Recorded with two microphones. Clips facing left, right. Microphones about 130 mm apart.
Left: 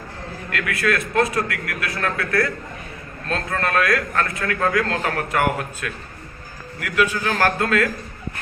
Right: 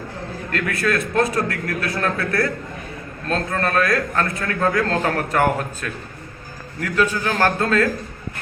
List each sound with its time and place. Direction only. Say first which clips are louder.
0.5 s a man's voice: right 1 dB; 30° right (ahead or behind)
7.0 s a man's voice: right 1 dB; 30° right (ahead or behind)